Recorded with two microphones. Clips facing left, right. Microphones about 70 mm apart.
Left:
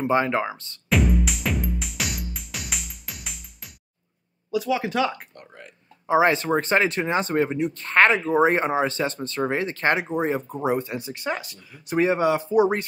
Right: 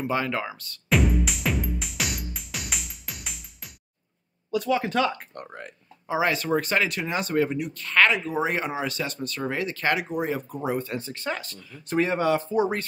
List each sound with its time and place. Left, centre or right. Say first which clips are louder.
0.0 s speech: left 5 dB; left
0.8 s music: left 1 dB; centre
4.5 s speech: even; centre
5.3 s speech: right 6 dB; right
6.0 s speech: left 5 dB; left